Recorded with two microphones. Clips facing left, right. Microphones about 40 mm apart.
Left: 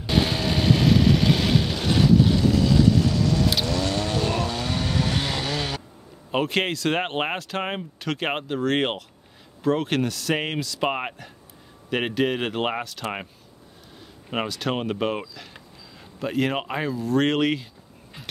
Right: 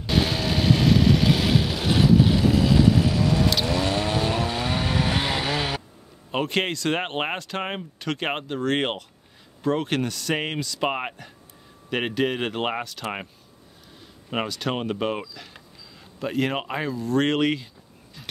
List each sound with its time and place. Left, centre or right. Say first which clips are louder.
0.0 s vehicle: left 1 dB; centre
3.6 s chainsaw: right 1 dB; centre
6.3 s speech: left 1 dB; centre
14.3 s speech: left 1 dB; centre